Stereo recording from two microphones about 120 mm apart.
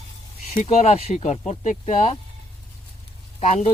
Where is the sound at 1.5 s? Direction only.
80° left.